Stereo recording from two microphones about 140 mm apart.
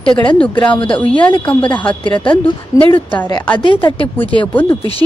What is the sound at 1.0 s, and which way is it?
Speech, 10° left (ahead or behind).